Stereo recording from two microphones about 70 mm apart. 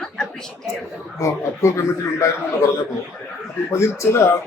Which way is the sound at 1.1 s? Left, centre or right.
Left.